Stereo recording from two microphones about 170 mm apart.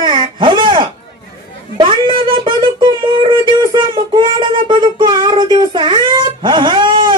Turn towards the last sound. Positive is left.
turn(degrees=-25)  # may be behind; listen again after turning